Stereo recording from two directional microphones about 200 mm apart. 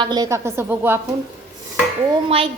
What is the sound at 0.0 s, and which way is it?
A woman's voice, 20° right (ahead or behind).